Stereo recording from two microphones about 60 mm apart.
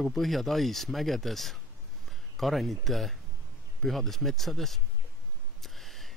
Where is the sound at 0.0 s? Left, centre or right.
Centre.